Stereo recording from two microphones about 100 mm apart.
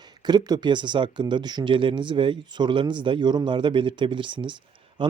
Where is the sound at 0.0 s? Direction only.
45° right (ahead or behind).